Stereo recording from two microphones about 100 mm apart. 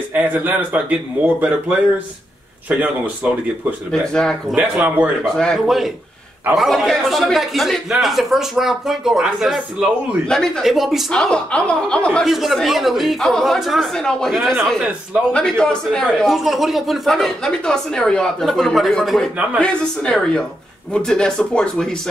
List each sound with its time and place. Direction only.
0.1 s speech: 15° right (ahead or behind)
3.9 s speech: 5° left (ahead or behind)
4.7 s speech: 15° right (ahead or behind)
5.2 s speech: 10° left (ahead or behind)
10.2 s speech: 5° left (ahead or behind)
12.3 s speech: centre (ahead or behind)